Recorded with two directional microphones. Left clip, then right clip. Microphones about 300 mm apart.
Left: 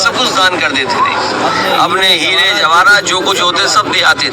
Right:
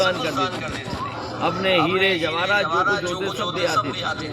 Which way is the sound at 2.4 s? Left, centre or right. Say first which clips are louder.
Left 11 dB; left.